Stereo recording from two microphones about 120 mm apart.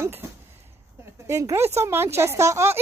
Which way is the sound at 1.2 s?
25° right (ahead or behind).